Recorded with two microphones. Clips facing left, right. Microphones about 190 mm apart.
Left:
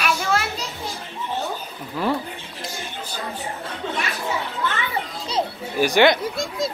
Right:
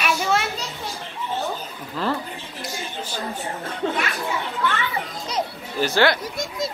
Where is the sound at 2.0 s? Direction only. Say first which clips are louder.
Left 2 dB; 10° left (ahead or behind).